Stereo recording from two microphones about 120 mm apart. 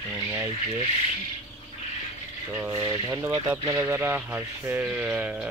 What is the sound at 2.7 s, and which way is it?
Speech, 30° right (ahead or behind).